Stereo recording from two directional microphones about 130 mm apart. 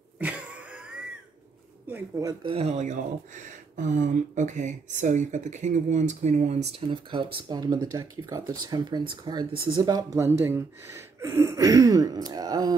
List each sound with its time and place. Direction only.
0.2 s a sound: 10° right (ahead or behind)
1.9 s speech: 15° right (ahead or behind)
2.5 s speech: 55° right (ahead or behind)
6.9 s speech: 40° right (ahead or behind)
7.6 s speech: 30° right (ahead or behind)